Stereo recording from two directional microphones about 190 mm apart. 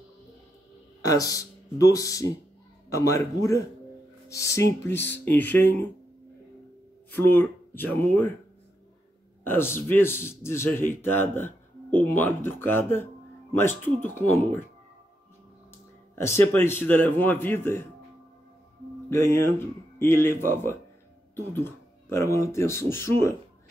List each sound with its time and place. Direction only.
1.0 s a man's voice: 20° left (ahead or behind)
7.1 s speech: 10° left (ahead or behind)
9.4 s a man's voice: 10° left (ahead or behind)
16.2 s a man's voice: 15° left (ahead or behind)
19.0 s a man's voice: 15° left (ahead or behind)